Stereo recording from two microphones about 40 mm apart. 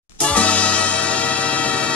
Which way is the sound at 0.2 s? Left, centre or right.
Left.